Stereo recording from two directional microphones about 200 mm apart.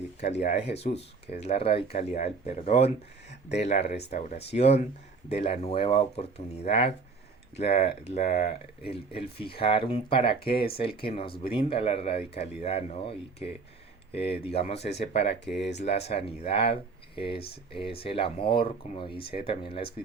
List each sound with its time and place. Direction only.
0.4 s speech: 35° left (ahead or behind)
10.4 s speech: 50° left (ahead or behind)
10.8 s speech: 30° left (ahead or behind)